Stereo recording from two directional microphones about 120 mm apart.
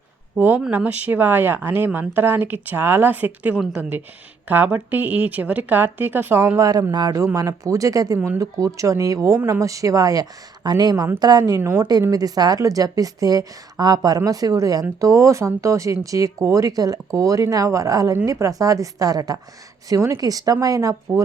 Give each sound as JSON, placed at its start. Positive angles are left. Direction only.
{"t": 0.3, "sound": "a woman's voice", "side_deg": -15}